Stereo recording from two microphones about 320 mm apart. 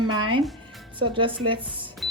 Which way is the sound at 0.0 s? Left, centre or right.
Right.